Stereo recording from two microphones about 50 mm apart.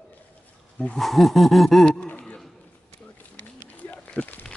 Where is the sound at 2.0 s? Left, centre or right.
Left.